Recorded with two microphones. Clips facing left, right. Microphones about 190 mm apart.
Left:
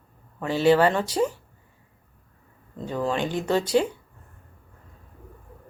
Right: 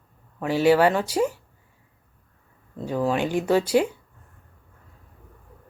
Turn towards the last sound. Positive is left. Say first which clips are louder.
# right 2 dB
turn(degrees=-10)  # may be behind; listen again after turning